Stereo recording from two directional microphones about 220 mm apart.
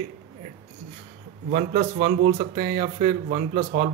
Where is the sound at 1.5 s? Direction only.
35° right (ahead or behind).